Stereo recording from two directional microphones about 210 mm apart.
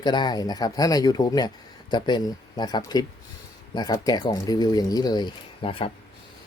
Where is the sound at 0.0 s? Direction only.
20° left (ahead or behind).